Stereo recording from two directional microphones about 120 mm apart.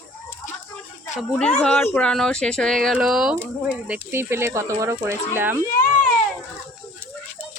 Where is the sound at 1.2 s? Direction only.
5° left (ahead or behind).